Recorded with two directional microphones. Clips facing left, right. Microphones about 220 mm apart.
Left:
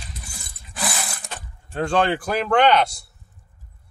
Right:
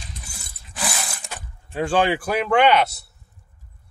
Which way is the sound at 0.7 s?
Centre (ahead or behind).